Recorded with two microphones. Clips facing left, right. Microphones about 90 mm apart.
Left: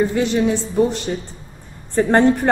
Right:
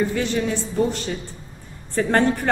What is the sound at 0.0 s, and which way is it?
Speech, 20° left (ahead or behind).